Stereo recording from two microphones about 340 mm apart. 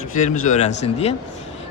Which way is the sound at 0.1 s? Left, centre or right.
Left.